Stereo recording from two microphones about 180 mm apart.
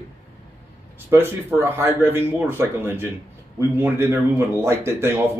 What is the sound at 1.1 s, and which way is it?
Speech, 15° right (ahead or behind).